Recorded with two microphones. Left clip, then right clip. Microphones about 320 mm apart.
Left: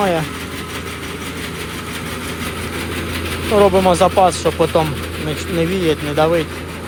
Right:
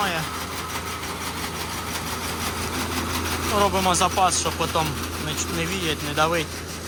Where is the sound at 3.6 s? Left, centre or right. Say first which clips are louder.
Left 9 dB; centre.